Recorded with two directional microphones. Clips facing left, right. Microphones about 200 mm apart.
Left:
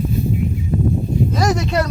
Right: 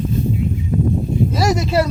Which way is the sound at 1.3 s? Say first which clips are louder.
Right 2 dB; 5° right (ahead or behind).